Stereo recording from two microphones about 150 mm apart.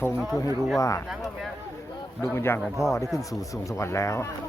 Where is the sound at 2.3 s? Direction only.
15° left (ahead or behind).